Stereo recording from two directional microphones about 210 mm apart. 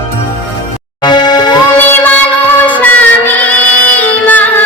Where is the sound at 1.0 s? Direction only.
20° left (ahead or behind).